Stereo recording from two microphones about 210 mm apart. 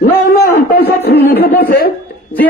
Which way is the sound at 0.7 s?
50° left (ahead or behind).